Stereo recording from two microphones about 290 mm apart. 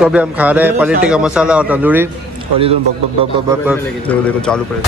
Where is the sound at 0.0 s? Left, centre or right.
Centre.